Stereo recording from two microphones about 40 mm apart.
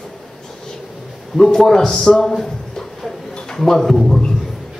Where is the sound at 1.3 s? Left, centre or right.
Centre.